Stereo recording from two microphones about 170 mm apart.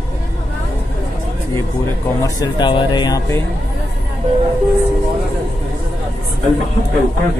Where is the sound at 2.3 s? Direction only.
25° left (ahead or behind).